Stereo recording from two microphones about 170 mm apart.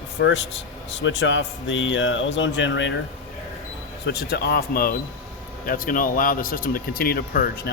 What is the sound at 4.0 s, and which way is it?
Speech, 70° left (ahead or behind).